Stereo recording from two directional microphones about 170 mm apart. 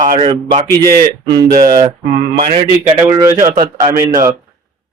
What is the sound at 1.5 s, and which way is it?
Speech, 50° right (ahead or behind).